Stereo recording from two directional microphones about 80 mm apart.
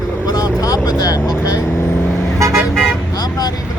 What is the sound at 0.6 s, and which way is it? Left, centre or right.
Speech, left.